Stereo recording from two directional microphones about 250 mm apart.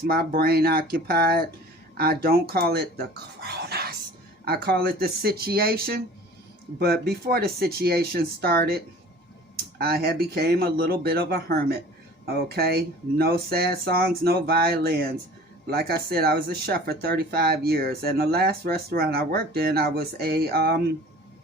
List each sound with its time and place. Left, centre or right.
0.0 s speech: right